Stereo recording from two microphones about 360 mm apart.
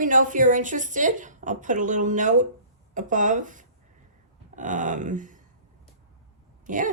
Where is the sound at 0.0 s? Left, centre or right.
Right.